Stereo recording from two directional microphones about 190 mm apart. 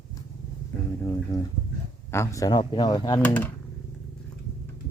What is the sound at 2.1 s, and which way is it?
Speech, 15° left (ahead or behind).